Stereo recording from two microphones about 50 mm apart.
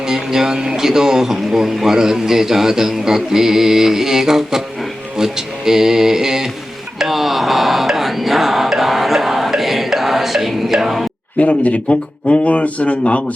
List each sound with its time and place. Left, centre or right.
0.1 s speech: centre
7.0 s music: centre
11.3 s speech: left